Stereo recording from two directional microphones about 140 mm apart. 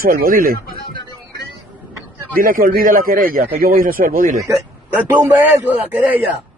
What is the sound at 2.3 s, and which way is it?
A man's voice, 90° right.